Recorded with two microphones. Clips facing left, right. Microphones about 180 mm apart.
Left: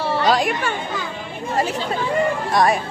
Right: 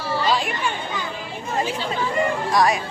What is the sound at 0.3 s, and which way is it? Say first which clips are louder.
Speech: left 4 dB; 45° left (ahead or behind).